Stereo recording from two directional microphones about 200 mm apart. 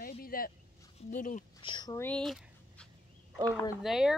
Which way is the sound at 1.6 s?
20° left (ahead or behind).